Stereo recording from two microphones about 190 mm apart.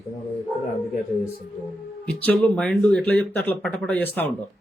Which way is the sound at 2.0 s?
5° left (ahead or behind).